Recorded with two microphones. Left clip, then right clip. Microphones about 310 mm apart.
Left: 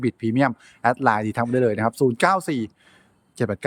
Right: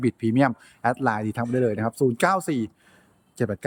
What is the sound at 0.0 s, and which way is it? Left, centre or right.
Speech, centre.